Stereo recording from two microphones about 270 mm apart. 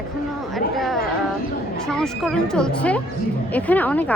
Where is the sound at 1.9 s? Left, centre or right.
Centre.